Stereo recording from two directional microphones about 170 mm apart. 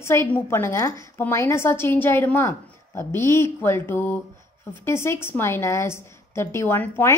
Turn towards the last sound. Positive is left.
turn(degrees=15)  # may be behind; listen again after turning